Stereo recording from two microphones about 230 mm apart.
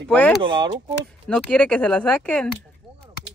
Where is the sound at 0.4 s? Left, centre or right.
Right.